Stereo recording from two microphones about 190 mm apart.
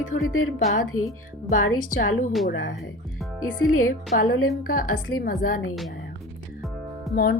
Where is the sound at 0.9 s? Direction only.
90° left.